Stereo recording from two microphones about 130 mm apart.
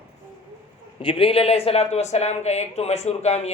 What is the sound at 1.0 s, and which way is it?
Speech, 45° left (ahead or behind).